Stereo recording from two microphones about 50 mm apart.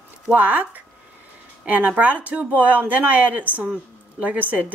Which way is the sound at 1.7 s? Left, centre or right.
Right.